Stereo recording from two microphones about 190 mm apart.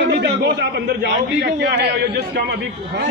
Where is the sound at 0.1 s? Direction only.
60° right (ahead or behind).